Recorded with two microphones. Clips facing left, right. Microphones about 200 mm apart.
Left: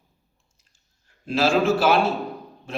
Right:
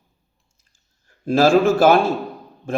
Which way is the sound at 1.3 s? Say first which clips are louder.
Right 5 dB; 50° right (ahead or behind).